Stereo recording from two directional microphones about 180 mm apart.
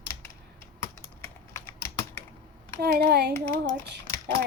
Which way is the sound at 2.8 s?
60° right (ahead or behind).